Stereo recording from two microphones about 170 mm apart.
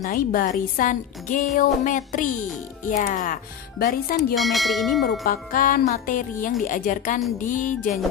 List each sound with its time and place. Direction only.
0.0 s speech: 55° left (ahead or behind)
4.4 s bell: centre (ahead or behind)
5.2 s speech: 55° left (ahead or behind)